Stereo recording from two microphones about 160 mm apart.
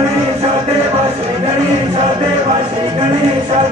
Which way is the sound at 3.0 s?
40° right (ahead or behind).